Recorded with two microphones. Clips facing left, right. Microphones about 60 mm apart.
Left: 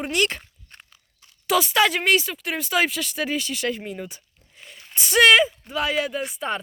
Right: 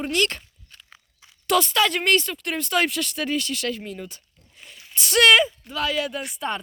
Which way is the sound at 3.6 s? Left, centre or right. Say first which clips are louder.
Left 2 dB; centre.